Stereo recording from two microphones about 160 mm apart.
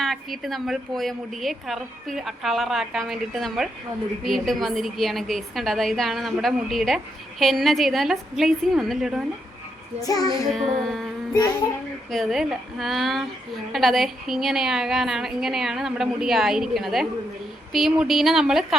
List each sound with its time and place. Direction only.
0.0 s a woman's voice: centre (ahead or behind)
10.0 s child singing: 20° left (ahead or behind)
10.8 s a woman's voice: centre (ahead or behind)
12.1 s a woman's voice: centre (ahead or behind)